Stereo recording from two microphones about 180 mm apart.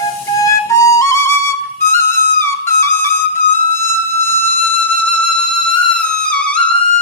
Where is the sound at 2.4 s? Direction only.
15° left (ahead or behind).